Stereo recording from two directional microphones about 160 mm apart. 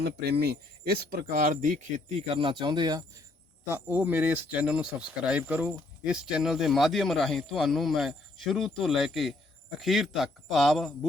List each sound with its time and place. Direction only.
0.0 s speech: 90° right; by 3.0 s 25° right (ahead or behind)
3.7 s speech: 15° right (ahead or behind)